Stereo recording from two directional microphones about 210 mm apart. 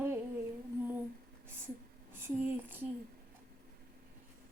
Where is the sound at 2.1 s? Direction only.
10° right (ahead or behind).